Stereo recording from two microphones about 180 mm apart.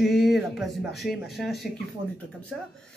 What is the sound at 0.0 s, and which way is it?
Speech, centre (ahead or behind).